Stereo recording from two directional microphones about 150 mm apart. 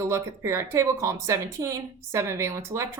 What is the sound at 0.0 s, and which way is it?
Speech, 20° right (ahead or behind).